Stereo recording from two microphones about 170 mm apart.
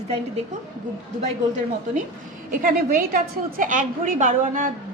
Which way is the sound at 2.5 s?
55° right (ahead or behind).